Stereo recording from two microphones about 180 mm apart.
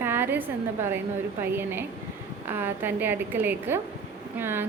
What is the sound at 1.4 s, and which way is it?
A woman's voice, 10° right (ahead or behind).